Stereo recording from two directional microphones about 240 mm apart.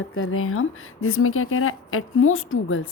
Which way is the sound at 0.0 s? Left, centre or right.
Left.